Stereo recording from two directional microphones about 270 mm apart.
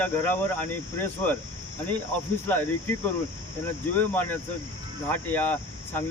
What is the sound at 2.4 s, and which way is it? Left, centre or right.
Speech, centre.